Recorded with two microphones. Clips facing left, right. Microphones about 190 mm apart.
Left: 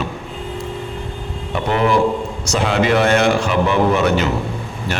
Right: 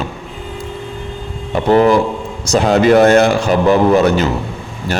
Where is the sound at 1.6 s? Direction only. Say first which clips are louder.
Right 5 dB; 35° right (ahead or behind).